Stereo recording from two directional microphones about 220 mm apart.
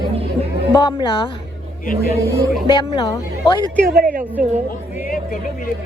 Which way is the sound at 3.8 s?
40° right (ahead or behind).